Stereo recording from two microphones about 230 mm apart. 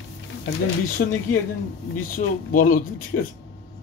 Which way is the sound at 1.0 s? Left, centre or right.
Left.